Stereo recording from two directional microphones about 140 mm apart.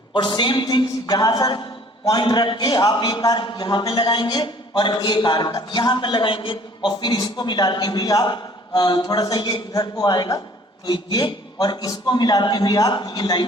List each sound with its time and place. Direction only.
0.1 s a man's voice: 35° left (ahead or behind)